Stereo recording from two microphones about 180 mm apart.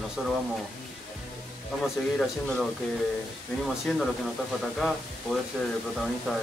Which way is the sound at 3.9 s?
5° left (ahead or behind).